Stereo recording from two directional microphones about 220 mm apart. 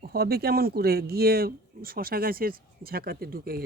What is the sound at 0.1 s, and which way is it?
Speech, 45° right (ahead or behind).